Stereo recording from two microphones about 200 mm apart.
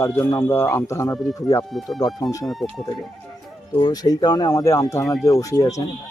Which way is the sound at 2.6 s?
Centre (ahead or behind).